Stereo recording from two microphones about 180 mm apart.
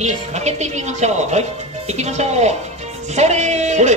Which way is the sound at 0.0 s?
40° right (ahead or behind).